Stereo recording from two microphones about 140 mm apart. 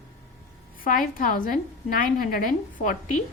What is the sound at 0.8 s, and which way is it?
Speech, 85° left.